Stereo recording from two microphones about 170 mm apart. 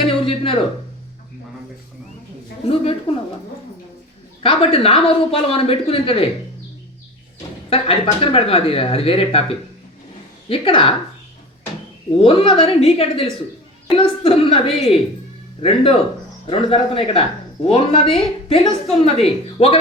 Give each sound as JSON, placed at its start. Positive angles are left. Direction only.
{"t": 0.3, "sound": "a sound", "side_deg": 30}
{"t": 2.6, "sound": "speech", "side_deg": 35}
{"t": 4.4, "sound": "speech", "side_deg": 35}
{"t": 7.7, "sound": "speech", "side_deg": 35}
{"t": 12.2, "sound": "speech", "side_deg": 35}